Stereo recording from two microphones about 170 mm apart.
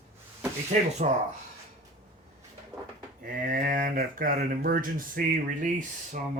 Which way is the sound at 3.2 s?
50° right (ahead or behind).